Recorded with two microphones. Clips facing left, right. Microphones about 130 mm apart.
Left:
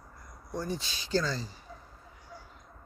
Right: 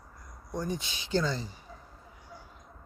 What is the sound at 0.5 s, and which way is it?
Speech, 15° right (ahead or behind).